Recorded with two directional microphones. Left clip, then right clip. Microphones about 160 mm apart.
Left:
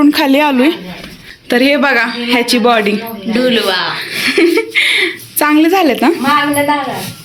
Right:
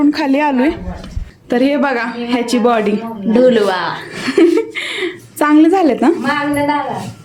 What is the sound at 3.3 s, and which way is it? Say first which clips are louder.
Speech: right 2 dB; 40° right (ahead or behind).